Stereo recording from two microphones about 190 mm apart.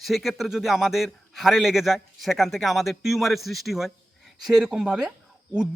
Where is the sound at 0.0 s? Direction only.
Centre (ahead or behind).